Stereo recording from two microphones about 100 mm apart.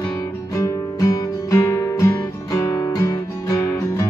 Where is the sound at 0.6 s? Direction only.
35° left (ahead or behind).